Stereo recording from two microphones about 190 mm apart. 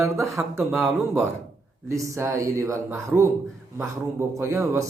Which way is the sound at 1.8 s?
15° right (ahead or behind).